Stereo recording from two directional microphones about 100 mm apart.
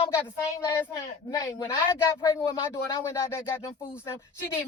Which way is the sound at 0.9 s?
35° left (ahead or behind).